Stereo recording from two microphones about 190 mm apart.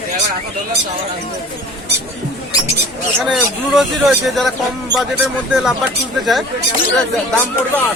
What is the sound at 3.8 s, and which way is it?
Speech, centre (ahead or behind).